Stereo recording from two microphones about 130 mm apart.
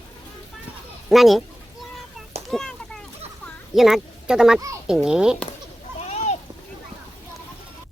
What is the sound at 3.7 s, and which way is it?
A child's voice, centre (ahead or behind).